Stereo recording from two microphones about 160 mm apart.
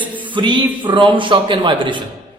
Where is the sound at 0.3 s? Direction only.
30° right (ahead or behind).